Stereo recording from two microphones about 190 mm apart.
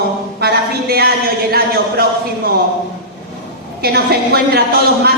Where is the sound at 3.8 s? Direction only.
55° right (ahead or behind).